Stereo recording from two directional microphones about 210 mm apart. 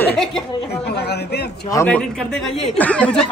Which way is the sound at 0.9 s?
50° left (ahead or behind).